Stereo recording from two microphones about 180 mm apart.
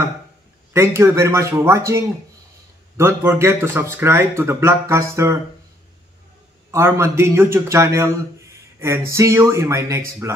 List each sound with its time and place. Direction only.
0.7 s speech: 15° right (ahead or behind)
6.7 s speech: 15° right (ahead or behind)